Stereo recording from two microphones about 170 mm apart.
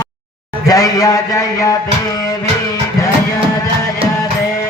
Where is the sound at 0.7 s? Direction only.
20° left (ahead or behind).